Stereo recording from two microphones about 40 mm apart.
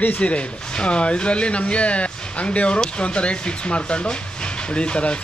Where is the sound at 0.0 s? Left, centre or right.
Left.